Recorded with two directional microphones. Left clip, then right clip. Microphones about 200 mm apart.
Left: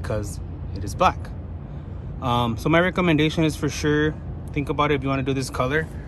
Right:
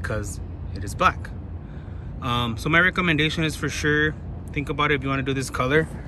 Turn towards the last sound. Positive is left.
turn(degrees=5)  # may be behind; listen again after turning